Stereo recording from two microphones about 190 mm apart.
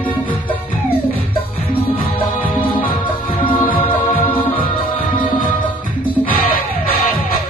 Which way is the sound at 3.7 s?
30° left (ahead or behind).